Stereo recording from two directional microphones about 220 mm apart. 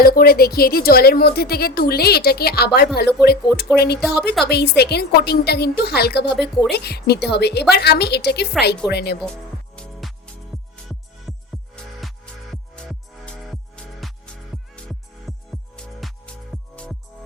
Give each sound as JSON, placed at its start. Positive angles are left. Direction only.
{"t": 0.0, "sound": "speech", "side_deg": 45}
{"t": 9.7, "sound": "music", "side_deg": 0}
{"t": 11.3, "sound": "music", "side_deg": 0}